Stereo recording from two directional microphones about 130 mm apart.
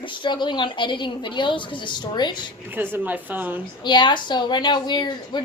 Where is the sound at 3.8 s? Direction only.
35° left (ahead or behind).